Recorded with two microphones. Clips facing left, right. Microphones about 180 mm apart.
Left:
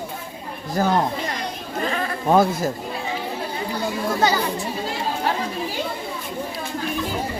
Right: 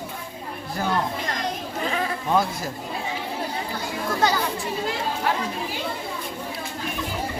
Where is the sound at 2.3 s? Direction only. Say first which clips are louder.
Left 7 dB; 50° left (ahead or behind).